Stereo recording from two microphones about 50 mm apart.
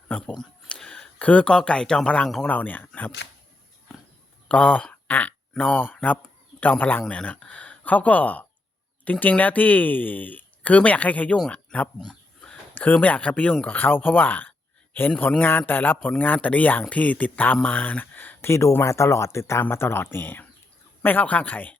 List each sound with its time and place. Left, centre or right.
0.8 s a sound: centre
1.2 s speech: left
2.5 s speech: left
4.4 s speech: left
11.9 s dog: centre
12.7 s speech: left
13.7 s speech: left
18.4 s speech: left
18.9 s speech: left
21.0 s speech: left